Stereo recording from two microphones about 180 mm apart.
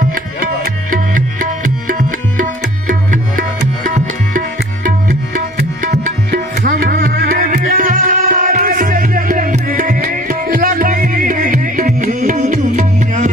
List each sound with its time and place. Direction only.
0.1 s music: 50° right (ahead or behind)
4.8 s tabla: 45° right (ahead or behind)